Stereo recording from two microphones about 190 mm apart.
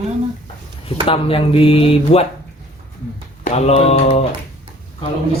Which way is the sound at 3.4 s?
35° left (ahead or behind).